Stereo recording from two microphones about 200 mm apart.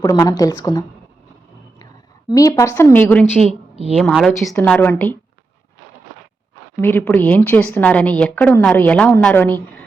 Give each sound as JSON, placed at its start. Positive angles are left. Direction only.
{"t": 0.0, "sound": "a woman's voice", "side_deg": 15}
{"t": 2.3, "sound": "a woman's voice", "side_deg": 15}
{"t": 3.3, "sound": "a woman's voice", "side_deg": -30}
{"t": 3.9, "sound": "a woman's voice", "side_deg": 0}
{"t": 6.8, "sound": "a woman's voice", "side_deg": 10}